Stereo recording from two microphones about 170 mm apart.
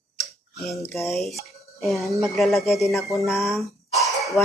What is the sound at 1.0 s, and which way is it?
Speech, centre (ahead or behind).